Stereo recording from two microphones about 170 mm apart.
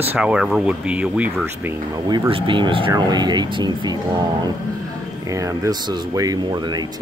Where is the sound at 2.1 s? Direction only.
30° right (ahead or behind).